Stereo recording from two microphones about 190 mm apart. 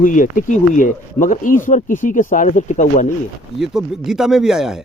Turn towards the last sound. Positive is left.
turn(degrees=-5)  # may be behind; listen again after turning